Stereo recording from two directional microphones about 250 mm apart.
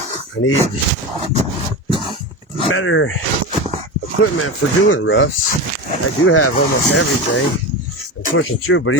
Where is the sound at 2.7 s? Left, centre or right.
Left.